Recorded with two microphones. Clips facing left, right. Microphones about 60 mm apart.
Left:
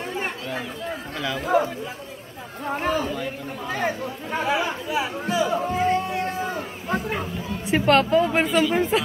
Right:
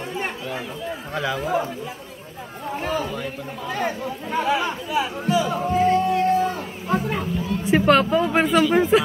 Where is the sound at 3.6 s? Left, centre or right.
Centre.